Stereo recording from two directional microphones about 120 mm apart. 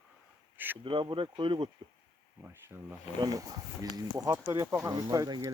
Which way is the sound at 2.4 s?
20° right (ahead or behind).